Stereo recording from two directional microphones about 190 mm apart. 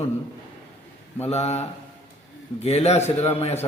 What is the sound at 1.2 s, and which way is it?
A man's voice, 35° left (ahead or behind).